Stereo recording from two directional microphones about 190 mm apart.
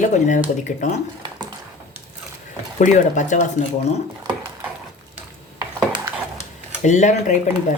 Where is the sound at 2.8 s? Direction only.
40° left (ahead or behind).